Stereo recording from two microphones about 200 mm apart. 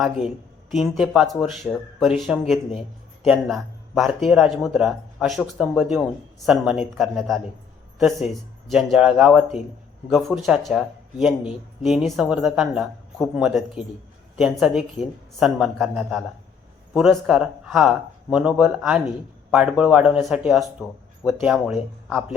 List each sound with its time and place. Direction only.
0.0 s speech: centre (ahead or behind)